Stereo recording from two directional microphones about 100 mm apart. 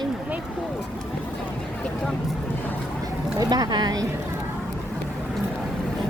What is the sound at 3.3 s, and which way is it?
Speech, 40° right (ahead or behind).